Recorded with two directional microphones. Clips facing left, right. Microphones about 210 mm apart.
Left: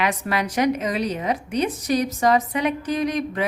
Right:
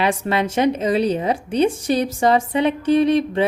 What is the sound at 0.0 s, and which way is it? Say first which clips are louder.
A woman's voice: right 4 dB; 30° right (ahead or behind).